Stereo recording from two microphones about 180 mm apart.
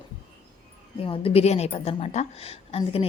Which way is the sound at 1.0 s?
30° left (ahead or behind).